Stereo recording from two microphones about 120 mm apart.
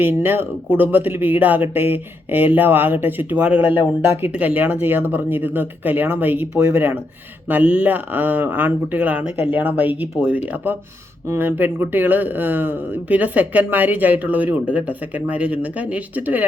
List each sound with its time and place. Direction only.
0.0 s speech: 20° right (ahead or behind)